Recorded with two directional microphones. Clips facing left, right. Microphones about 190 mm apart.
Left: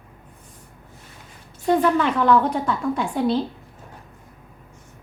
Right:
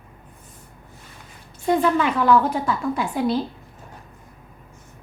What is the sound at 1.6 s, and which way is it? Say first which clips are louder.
A woman's voice: left 1 dB; 10° right (ahead or behind).